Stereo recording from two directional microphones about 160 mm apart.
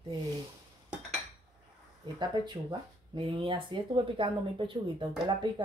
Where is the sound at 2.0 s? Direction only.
30° right (ahead or behind).